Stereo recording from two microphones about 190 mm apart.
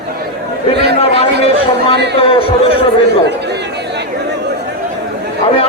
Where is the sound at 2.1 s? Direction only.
30° left (ahead or behind).